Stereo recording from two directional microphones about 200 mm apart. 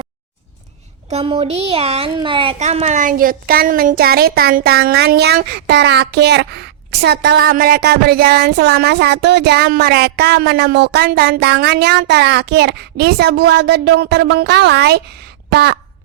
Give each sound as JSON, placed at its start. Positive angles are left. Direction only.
{"t": 1.1, "sound": "a woman's voice", "side_deg": -30}